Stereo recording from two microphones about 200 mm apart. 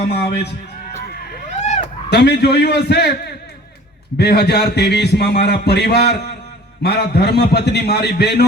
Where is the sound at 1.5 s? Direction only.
35° left (ahead or behind).